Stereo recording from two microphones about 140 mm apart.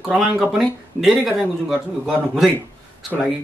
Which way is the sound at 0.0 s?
Centre (ahead or behind).